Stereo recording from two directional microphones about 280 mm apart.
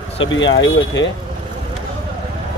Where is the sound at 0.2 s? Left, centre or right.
Left.